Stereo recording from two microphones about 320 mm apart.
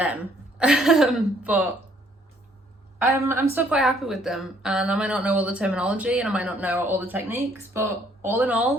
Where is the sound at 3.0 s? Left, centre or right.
Centre.